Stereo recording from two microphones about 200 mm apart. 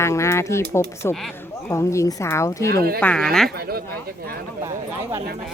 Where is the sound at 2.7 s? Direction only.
50° right (ahead or behind).